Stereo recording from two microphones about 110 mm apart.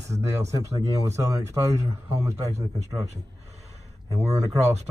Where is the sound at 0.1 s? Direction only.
30° right (ahead or behind).